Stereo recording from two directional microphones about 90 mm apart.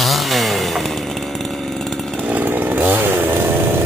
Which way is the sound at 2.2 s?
20° right (ahead or behind).